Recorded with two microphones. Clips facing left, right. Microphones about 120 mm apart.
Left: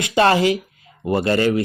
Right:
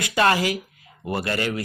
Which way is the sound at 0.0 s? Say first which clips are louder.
Left 5 dB; 25° left (ahead or behind).